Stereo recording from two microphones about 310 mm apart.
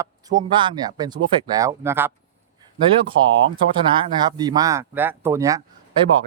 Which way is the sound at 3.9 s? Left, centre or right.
Centre.